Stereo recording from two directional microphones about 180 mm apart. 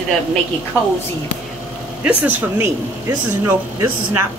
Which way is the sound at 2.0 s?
10° right (ahead or behind).